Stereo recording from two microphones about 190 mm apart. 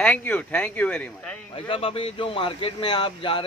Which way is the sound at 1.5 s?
30° left (ahead or behind).